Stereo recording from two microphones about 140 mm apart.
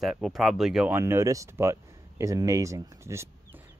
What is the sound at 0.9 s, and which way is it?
Speech, 20° right (ahead or behind).